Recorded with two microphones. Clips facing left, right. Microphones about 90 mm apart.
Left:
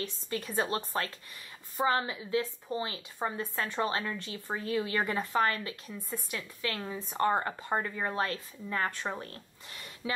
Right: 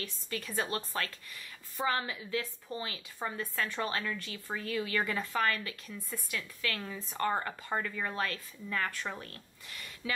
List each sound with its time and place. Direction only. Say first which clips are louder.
0.0 s a woman's voice: left 4 dB; 25° left (ahead or behind)